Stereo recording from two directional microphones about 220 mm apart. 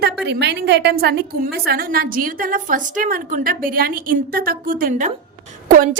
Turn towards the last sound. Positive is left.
turn(degrees=-40)  # may be behind; listen again after turning